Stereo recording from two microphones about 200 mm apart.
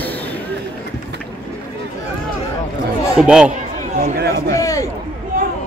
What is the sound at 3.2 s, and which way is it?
Speech, 5° right (ahead or behind).